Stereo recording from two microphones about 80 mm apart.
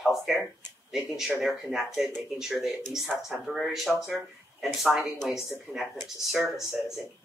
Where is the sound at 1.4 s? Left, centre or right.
Centre.